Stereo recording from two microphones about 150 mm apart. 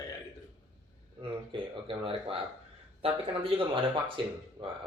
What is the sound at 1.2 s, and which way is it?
A man's voice, 35° right (ahead or behind).